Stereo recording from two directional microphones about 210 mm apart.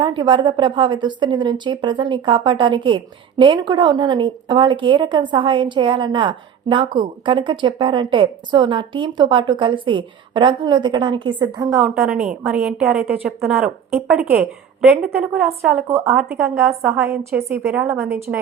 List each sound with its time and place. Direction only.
0.0 s a woman's voice: 20° right (ahead or behind)
11.8 s a woman's voice: 5° right (ahead or behind)